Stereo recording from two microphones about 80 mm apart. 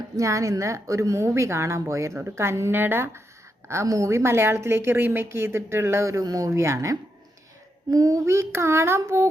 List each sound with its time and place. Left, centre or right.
0.2 s a woman's voice: right
3.7 s a woman's voice: right